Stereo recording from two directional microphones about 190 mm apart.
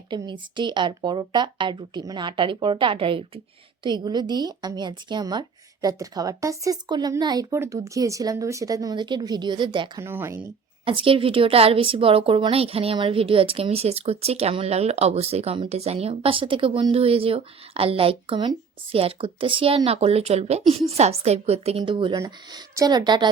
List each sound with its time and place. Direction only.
0.1 s a woman's voice: 25° right (ahead or behind)
10.0 s speech: 15° right (ahead or behind)
10.8 s a woman's voice: 25° right (ahead or behind)